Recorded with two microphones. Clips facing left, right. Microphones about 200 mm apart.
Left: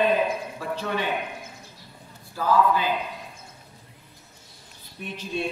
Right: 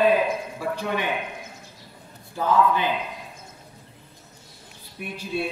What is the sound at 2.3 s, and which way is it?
Speech, 20° right (ahead or behind).